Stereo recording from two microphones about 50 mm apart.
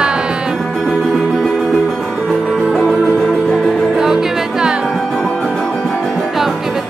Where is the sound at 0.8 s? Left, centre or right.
Centre.